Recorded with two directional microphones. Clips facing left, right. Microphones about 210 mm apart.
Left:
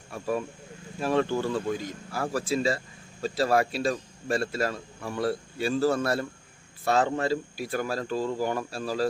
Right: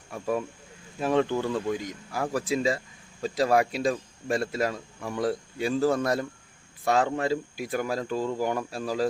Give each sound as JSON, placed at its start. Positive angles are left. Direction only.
{"t": 0.9, "sound": "speech", "side_deg": -15}